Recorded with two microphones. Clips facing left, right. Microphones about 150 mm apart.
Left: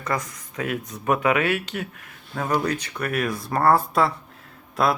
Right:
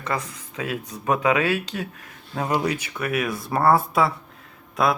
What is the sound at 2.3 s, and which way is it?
Speech, 15° right (ahead or behind).